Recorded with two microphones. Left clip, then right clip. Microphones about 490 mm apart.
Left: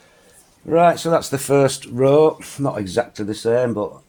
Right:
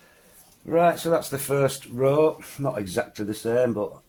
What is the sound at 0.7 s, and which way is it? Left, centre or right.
Speech, right.